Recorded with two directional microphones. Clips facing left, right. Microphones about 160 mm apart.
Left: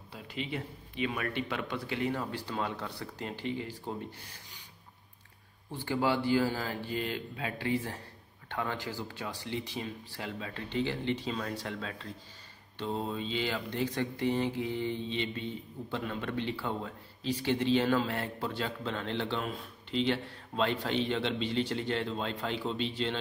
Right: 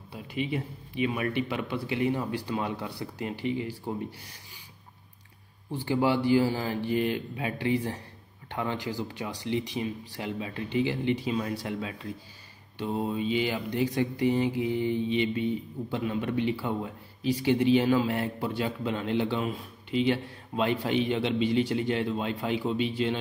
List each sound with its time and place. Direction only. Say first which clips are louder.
0.1 s speech: right 6 dB; 15° right (ahead or behind)
5.7 s speech: right 4 dB; 15° right (ahead or behind)